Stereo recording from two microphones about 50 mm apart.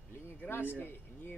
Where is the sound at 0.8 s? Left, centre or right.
Left.